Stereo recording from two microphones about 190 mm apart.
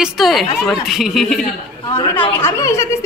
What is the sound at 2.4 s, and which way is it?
Speech, 15° left (ahead or behind).